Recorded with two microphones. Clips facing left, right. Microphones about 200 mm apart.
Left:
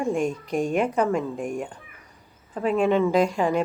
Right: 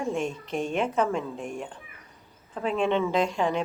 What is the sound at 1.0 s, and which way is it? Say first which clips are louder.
Speech: left 4 dB; 10° left (ahead or behind).